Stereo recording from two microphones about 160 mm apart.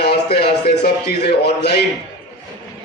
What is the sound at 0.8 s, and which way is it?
Speech, 90° left.